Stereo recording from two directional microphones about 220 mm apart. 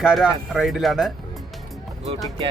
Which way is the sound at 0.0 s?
5° right (ahead or behind).